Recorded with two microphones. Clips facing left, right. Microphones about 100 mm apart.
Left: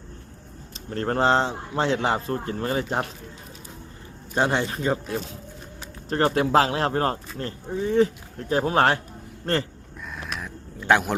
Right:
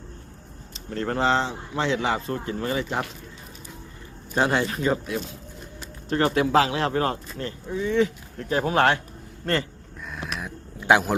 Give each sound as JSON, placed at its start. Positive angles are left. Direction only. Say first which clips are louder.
{"t": 0.9, "sound": "speech", "louder": "left 2 dB", "side_deg": 40}
{"t": 4.4, "sound": "speech", "louder": "right 1 dB", "side_deg": 25}
{"t": 10.1, "sound": "a sound", "louder": "right 1 dB", "side_deg": 0}